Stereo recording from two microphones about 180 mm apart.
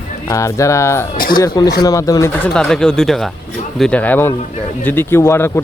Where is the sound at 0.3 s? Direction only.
15° left (ahead or behind).